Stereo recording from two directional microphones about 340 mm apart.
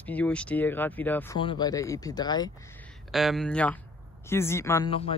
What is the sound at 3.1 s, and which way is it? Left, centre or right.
Speech, centre.